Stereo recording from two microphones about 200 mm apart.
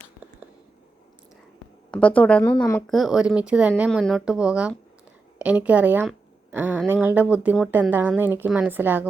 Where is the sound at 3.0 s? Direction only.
5° right (ahead or behind).